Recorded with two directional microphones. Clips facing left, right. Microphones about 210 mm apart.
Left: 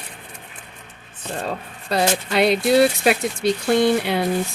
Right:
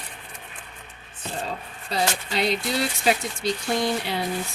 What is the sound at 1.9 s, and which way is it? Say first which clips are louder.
Speech: left 6 dB; 65° left (ahead or behind).